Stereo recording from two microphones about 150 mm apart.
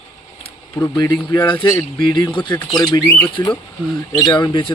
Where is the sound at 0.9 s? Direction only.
20° left (ahead or behind).